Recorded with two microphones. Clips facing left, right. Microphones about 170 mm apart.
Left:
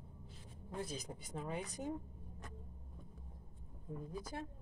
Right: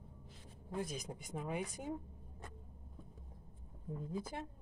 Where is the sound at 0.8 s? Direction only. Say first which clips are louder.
Right 2 dB; 10° right (ahead or behind).